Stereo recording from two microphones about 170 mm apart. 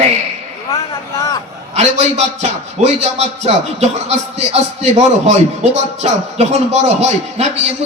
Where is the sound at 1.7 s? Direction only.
40° right (ahead or behind).